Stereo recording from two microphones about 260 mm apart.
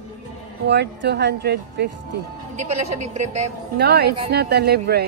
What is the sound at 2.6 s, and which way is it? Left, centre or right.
Speech, right.